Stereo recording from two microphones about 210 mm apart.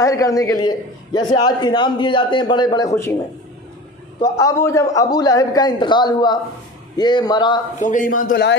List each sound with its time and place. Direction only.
0.0 s a man's voice: 15° left (ahead or behind)
4.2 s a man's voice: 15° left (ahead or behind)
7.8 s a man's voice: 40° left (ahead or behind)